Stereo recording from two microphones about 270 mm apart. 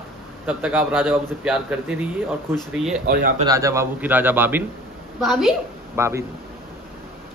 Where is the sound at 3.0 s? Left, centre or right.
Right.